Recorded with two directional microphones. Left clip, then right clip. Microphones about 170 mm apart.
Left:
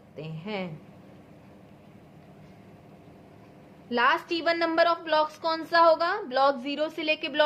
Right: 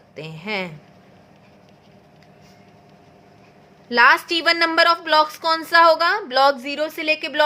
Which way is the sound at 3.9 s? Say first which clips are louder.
Right 10 dB; 50° right (ahead or behind).